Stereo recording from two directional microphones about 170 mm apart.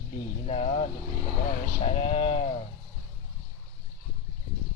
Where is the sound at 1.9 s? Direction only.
35° left (ahead or behind).